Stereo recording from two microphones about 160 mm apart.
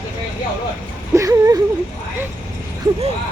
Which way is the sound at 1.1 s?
20° right (ahead or behind).